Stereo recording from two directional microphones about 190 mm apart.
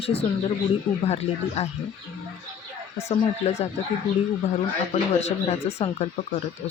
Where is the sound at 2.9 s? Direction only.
35° left (ahead or behind).